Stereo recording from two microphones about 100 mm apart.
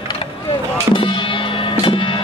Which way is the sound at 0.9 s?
55° left (ahead or behind).